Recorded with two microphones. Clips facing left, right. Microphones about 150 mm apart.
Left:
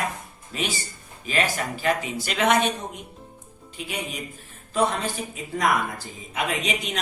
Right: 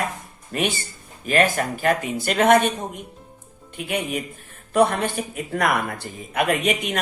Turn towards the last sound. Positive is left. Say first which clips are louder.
# right 6 dB
turn(degrees=-55)  # may be behind; listen again after turning